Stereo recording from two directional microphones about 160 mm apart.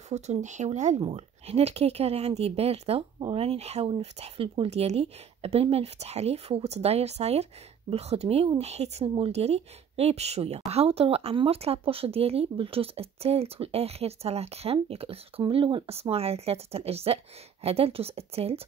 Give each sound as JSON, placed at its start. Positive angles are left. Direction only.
{"t": 0.1, "sound": "speech", "side_deg": -45}